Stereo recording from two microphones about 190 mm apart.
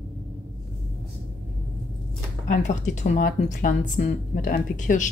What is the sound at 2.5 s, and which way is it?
A woman's voice, 40° left (ahead or behind).